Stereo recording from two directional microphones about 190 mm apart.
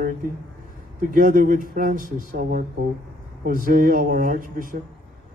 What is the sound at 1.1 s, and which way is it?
Speech, 45° right (ahead or behind).